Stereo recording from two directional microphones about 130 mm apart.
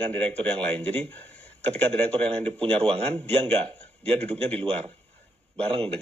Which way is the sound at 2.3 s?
45° right (ahead or behind).